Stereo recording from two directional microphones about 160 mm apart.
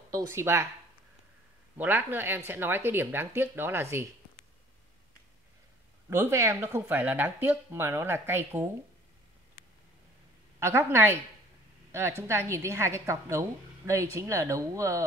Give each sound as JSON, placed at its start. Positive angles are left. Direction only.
{"t": 0.1, "sound": "a woman's voice", "side_deg": -15}
{"t": 1.8, "sound": "a woman's voice", "side_deg": -10}
{"t": 6.0, "sound": "a woman's voice", "side_deg": -15}
{"t": 10.6, "sound": "a woman's voice", "side_deg": -15}